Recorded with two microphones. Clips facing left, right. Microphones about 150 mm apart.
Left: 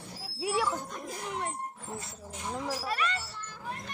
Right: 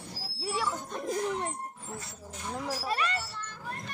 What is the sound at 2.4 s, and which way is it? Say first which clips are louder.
Speech: left 1 dB; 5° left (ahead or behind).